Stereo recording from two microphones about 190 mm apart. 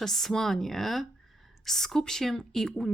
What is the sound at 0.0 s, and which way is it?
Speech, centre (ahead or behind).